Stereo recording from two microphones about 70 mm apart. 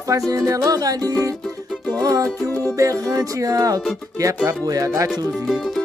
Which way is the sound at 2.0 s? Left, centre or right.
Right.